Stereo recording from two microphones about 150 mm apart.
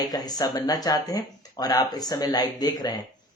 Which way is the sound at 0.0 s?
25° left (ahead or behind).